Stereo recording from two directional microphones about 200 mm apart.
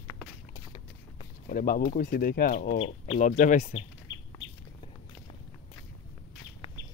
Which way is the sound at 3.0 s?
30° left (ahead or behind).